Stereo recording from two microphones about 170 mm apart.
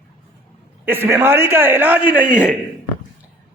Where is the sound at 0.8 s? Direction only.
10° right (ahead or behind).